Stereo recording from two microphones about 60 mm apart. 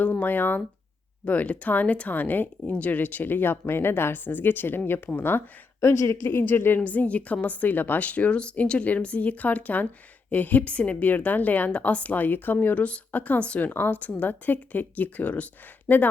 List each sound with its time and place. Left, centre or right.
0.0 s speech: left
5.8 s speech: left
6.2 s speech: left
6.8 s a woman's voice: left